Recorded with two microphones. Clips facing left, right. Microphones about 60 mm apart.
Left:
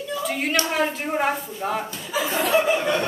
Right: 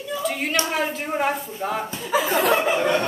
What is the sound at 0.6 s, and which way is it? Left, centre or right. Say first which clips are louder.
A woman's voice: left 1 dB; centre.